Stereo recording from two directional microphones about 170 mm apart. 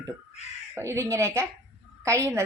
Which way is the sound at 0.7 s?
15° right (ahead or behind).